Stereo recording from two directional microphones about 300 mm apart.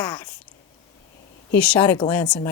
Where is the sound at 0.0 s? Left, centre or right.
Centre.